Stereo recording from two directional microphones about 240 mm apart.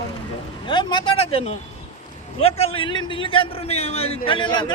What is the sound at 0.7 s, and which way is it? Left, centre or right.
A man's voice, centre.